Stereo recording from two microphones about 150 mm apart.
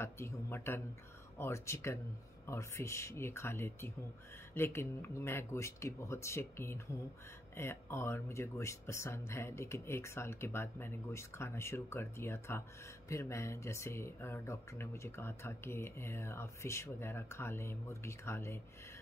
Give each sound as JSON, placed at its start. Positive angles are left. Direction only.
{"t": 0.0, "sound": "speech", "side_deg": 15}